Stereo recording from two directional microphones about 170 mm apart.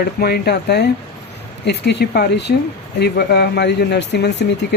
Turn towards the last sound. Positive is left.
turn(degrees=80)